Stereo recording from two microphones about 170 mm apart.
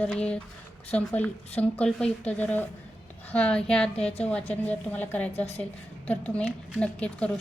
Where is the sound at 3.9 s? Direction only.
35° left (ahead or behind).